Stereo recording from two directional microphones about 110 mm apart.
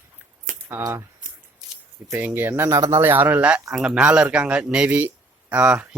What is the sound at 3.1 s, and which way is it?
Speech, 15° right (ahead or behind).